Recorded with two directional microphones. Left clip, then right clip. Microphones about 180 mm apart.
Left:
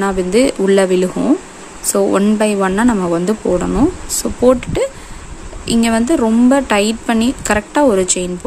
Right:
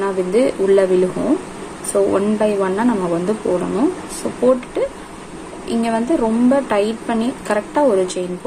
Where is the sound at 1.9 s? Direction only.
50° left (ahead or behind).